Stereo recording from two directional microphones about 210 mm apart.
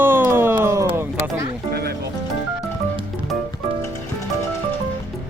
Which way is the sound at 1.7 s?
50° right (ahead or behind).